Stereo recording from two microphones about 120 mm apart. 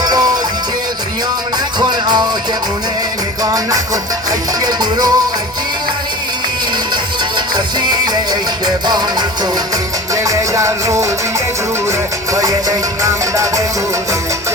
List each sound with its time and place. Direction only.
0.0 s music: 35° right (ahead or behind)
1.8 s music: 35° right (ahead or behind)
3.4 s music: 30° right (ahead or behind)
6.9 s music: 35° right (ahead or behind)
10.2 s music: 25° right (ahead or behind)